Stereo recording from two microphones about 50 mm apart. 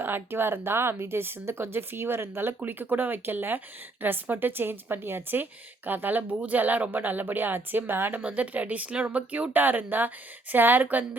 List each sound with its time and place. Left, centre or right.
0.0 s speech: right
2.6 s a woman's voice: right
8.2 s a woman's voice: right